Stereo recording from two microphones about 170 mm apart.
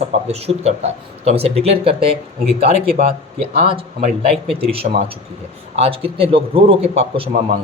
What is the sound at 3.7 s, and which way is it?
Speech, 30° right (ahead or behind).